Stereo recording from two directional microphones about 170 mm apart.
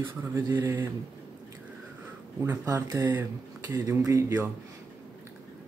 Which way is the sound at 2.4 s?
15° right (ahead or behind).